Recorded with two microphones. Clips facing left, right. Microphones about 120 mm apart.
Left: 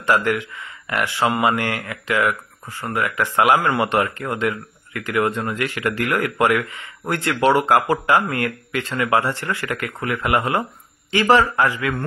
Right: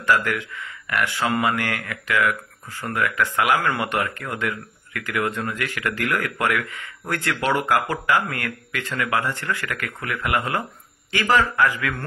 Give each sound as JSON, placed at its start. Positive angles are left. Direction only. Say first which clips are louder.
{"t": 0.0, "sound": "speech", "louder": "left 2 dB", "side_deg": 25}